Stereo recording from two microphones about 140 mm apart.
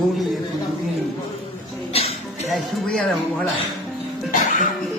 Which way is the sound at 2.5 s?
Centre (ahead or behind).